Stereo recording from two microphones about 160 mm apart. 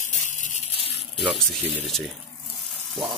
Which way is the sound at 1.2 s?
Centre (ahead or behind).